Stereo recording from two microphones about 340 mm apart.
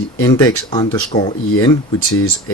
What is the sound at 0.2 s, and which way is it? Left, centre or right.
Speech, centre.